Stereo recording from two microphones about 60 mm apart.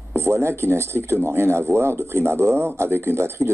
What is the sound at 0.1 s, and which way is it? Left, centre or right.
Speech, right.